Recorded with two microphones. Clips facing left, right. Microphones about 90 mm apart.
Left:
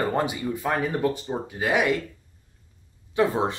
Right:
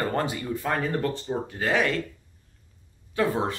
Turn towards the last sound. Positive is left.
turn(degrees=20)  # may be behind; listen again after turning